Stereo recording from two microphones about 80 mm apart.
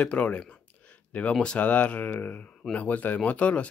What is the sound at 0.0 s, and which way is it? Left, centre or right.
Speech, centre.